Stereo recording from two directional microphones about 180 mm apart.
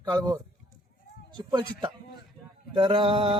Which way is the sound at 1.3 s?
25° right (ahead or behind).